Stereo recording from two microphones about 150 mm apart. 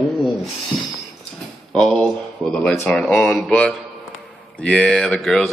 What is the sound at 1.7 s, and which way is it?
Speech, 5° left (ahead or behind).